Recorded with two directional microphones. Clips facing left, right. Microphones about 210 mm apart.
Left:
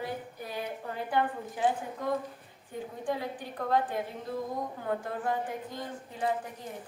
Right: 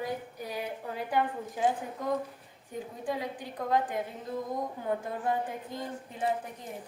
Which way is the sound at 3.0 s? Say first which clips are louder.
Left 1 dB; 10° right (ahead or behind).